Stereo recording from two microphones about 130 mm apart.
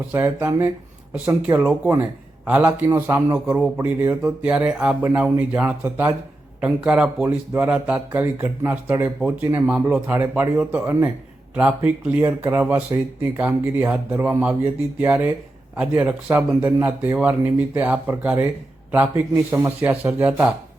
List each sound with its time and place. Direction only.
0.1 s speech: 15° right (ahead or behind)